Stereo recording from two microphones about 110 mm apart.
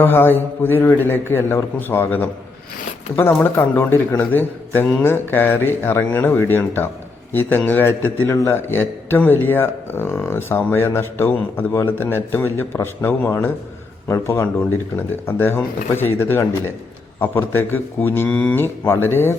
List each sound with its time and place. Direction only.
0.0 s a man's voice: 20° left (ahead or behind)